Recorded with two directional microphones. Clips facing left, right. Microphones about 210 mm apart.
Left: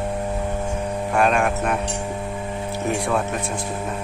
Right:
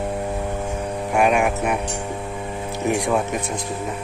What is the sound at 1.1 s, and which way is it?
Speech, 10° right (ahead or behind).